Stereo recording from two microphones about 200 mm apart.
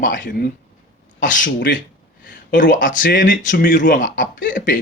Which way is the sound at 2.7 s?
40° left (ahead or behind).